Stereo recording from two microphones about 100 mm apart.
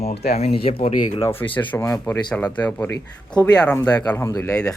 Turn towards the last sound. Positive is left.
turn(degrees=30)  # may be behind; listen again after turning